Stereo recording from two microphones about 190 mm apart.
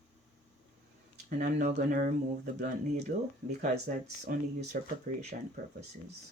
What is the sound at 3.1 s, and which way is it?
Speech, 45° right (ahead or behind).